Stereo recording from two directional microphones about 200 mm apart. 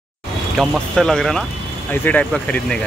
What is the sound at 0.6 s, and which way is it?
Speech, 5° left (ahead or behind).